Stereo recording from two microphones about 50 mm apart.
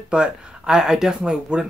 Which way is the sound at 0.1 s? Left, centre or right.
Centre.